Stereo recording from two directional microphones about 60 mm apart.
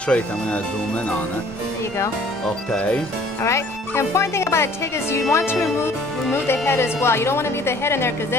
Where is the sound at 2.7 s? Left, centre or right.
Centre.